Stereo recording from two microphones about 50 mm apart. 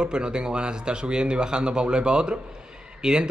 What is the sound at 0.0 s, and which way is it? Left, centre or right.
A man's voice, centre.